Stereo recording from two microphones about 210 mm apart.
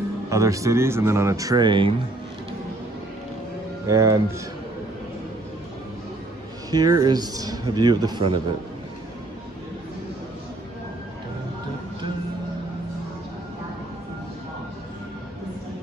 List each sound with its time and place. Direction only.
0.3 s speech: 15° right (ahead or behind)
3.8 s speech: 15° right (ahead or behind)
6.7 s a man's voice: 20° right (ahead or behind)